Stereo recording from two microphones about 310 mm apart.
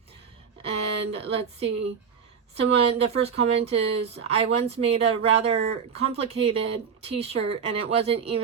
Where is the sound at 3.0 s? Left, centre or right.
Centre.